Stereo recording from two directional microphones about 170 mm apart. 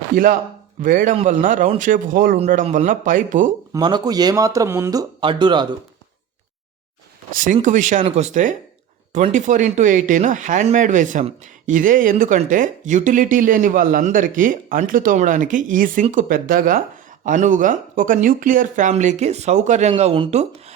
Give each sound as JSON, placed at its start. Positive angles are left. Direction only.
{"t": 0.8, "sound": "speech", "side_deg": -50}
{"t": 3.7, "sound": "speech", "side_deg": -25}
{"t": 7.3, "sound": "speech", "side_deg": -50}